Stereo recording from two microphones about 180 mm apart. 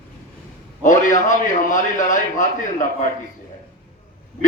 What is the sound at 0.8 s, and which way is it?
A man's voice, 45° left (ahead or behind).